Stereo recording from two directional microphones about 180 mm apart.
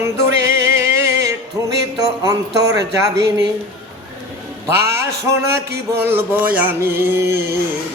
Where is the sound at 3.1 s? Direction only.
65° right (ahead or behind).